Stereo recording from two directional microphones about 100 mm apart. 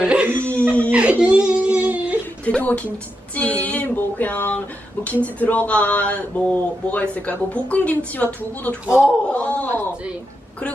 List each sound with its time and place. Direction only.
0.0 s a sound: 10° right (ahead or behind)
0.9 s whimper: 15° right (ahead or behind)
2.4 s a sound: 15° left (ahead or behind)
5.0 s speech: 15° left (ahead or behind)
8.9 s speech: 10° right (ahead or behind)
9.3 s speech: 15° left (ahead or behind)